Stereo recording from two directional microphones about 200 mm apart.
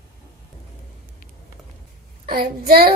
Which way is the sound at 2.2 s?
50° right (ahead or behind).